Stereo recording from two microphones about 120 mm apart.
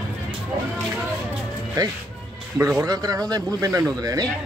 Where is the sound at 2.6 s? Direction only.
25° right (ahead or behind).